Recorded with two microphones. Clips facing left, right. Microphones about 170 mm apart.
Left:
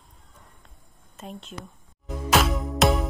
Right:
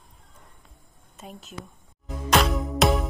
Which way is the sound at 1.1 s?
Centre (ahead or behind).